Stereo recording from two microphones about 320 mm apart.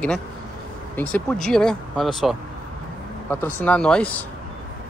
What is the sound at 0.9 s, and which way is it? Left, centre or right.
Speech, centre.